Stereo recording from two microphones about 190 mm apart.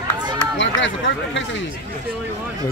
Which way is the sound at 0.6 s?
80° left.